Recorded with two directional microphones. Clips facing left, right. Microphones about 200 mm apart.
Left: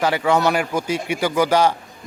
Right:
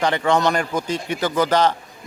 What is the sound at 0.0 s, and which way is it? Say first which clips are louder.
A man's voice: left 1 dB; 5° left (ahead or behind).